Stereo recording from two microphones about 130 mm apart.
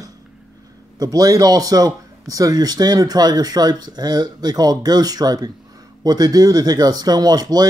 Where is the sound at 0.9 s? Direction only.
30° right (ahead or behind).